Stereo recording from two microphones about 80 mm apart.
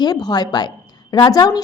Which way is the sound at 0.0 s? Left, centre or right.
Left.